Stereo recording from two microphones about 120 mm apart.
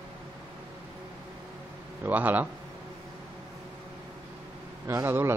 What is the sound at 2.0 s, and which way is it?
Speech, 15° right (ahead or behind).